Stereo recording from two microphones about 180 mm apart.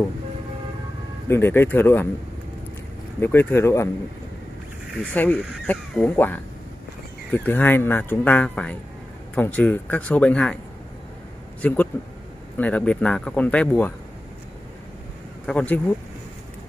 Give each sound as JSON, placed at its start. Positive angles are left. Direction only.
{"t": 1.3, "sound": "speech", "side_deg": 10}
{"t": 3.2, "sound": "speech", "side_deg": 10}
{"t": 4.9, "sound": "speech", "side_deg": 10}
{"t": 7.3, "sound": "speech", "side_deg": 10}
{"t": 11.6, "sound": "speech", "side_deg": 10}
{"t": 15.4, "sound": "speech", "side_deg": 5}